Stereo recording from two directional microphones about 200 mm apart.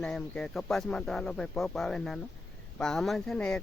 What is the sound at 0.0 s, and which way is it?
Speech, 5° left (ahead or behind).